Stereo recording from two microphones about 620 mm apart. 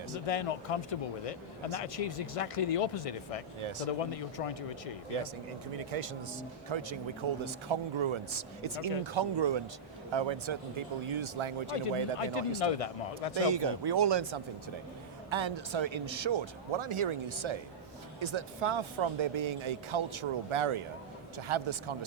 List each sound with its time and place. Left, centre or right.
0.3 s speech: left
3.6 s a man's voice: right
3.8 s speech: left
5.7 s speech: right
6.7 s a man's voice: right
12.2 s speech: left
13.3 s a man's voice: right